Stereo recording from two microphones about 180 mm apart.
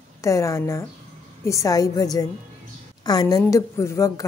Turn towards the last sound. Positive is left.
turn(degrees=15)  # may be behind; listen again after turning